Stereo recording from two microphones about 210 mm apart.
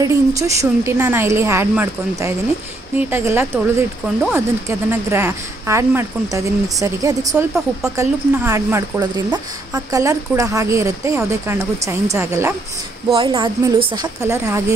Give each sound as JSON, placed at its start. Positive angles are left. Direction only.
{"t": 0.4, "sound": "speech", "side_deg": -15}
{"t": 13.1, "sound": "speech", "side_deg": -25}